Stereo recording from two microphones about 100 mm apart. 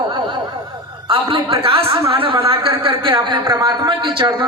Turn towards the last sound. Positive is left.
turn(degrees=-50)  # may be behind; listen again after turning